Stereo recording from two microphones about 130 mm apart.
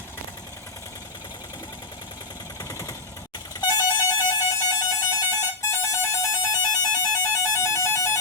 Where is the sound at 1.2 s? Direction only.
30° left (ahead or behind).